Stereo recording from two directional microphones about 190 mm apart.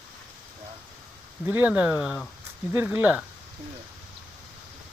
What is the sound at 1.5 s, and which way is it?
Speech, 10° right (ahead or behind).